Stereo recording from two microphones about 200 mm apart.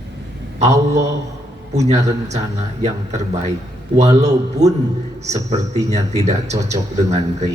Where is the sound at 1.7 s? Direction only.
35° right (ahead or behind).